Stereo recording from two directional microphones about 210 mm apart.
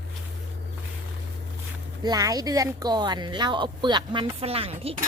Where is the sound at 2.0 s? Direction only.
15° right (ahead or behind).